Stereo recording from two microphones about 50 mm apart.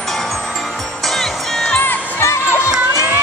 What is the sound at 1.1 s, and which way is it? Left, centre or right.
Music, centre.